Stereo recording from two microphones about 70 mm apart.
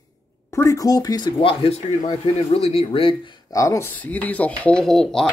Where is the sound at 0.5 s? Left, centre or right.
Left.